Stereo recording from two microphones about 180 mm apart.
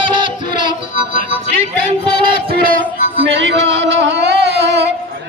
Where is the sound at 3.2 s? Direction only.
75° right (ahead or behind).